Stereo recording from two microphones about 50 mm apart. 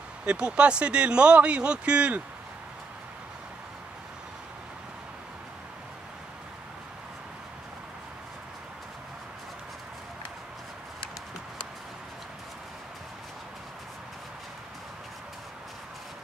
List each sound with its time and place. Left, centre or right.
0.2 s speech: right